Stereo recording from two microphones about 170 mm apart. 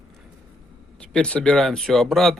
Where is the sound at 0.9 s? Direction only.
5° left (ahead or behind).